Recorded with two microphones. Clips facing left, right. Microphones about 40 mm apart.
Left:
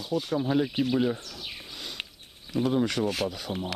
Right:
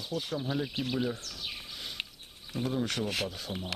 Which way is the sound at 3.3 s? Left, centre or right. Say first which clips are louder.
Left 5 dB; left.